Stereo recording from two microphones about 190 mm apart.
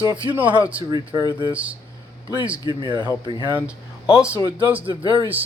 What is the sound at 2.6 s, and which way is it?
Speech, 20° right (ahead or behind).